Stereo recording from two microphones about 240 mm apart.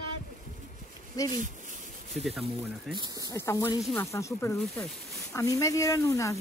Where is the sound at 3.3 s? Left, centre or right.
Centre.